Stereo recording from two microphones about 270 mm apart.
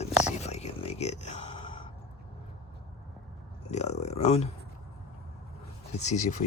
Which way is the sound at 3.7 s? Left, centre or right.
Left.